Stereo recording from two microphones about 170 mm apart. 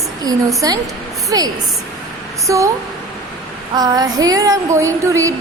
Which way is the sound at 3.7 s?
25° right (ahead or behind).